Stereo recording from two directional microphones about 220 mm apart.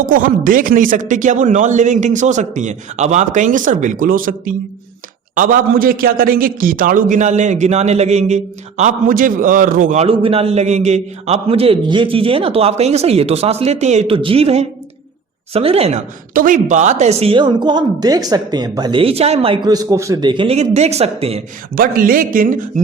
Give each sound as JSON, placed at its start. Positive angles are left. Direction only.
{"t": 0.0, "sound": "a man's voice", "side_deg": -40}
{"t": 21.8, "sound": "a man's voice", "side_deg": -40}